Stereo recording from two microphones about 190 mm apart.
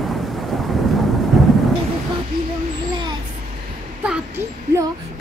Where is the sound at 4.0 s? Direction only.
10° right (ahead or behind).